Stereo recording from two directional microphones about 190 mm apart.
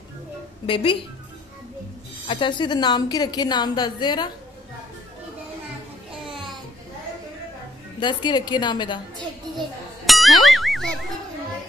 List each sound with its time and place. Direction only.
0.7 s a woman's voice: 30° left (ahead or behind)
2.2 s a woman's voice: 25° left (ahead or behind)
8.0 s a woman's voice: 25° left (ahead or behind)
9.6 s music: centre (ahead or behind)